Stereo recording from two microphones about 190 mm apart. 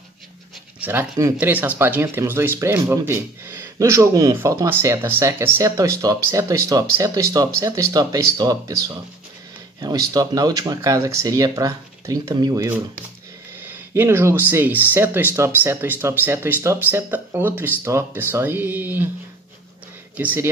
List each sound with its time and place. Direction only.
0.7 s speech: 10° right (ahead or behind)
20.2 s speech: 10° right (ahead or behind)